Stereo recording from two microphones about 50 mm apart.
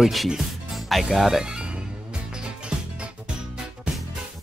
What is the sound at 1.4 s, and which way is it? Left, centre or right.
Music, centre.